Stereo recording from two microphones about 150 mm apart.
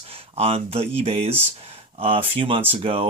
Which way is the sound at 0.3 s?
40° right (ahead or behind).